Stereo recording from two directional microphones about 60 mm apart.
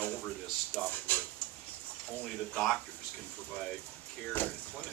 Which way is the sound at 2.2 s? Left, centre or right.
Centre.